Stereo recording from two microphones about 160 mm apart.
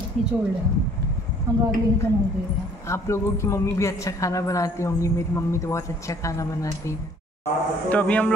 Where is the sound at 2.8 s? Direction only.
20° left (ahead or behind).